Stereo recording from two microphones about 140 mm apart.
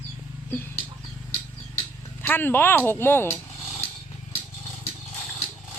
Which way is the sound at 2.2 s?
15° left (ahead or behind).